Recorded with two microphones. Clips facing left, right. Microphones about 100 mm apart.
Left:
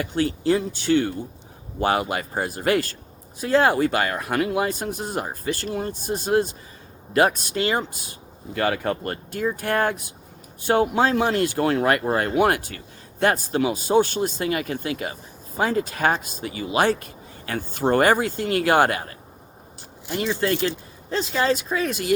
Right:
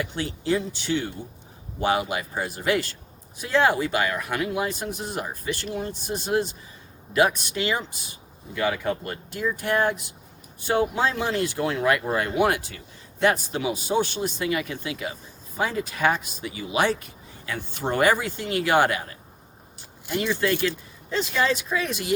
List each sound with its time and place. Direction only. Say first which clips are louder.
0.0 s speech: left 6 dB; 50° left (ahead or behind)
8.5 s speech: left 2 dB; 55° left (ahead or behind)
21.1 s speech: left 2 dB; 40° left (ahead or behind)